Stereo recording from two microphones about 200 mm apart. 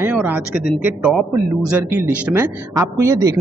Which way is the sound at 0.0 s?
10° right (ahead or behind).